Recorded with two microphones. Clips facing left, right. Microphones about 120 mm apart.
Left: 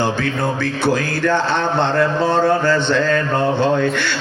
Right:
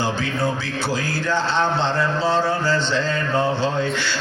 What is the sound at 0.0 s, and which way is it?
A man's voice, 55° left (ahead or behind).